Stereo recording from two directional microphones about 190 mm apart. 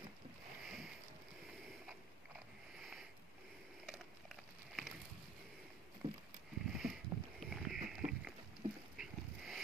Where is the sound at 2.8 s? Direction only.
Centre (ahead or behind).